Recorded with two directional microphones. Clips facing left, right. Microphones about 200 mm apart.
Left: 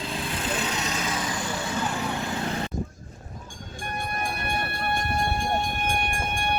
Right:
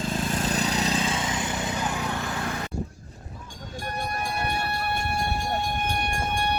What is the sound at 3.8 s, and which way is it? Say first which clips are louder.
Train: even; 50° left (ahead or behind).